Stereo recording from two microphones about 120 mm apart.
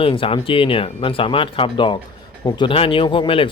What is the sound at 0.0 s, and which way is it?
Speech, 50° left (ahead or behind).